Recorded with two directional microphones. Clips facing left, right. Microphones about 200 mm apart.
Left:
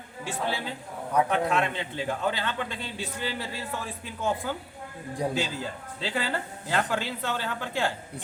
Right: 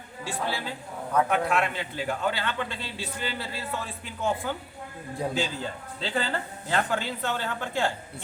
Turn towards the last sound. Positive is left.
turn(degrees=10)  # may be behind; listen again after turning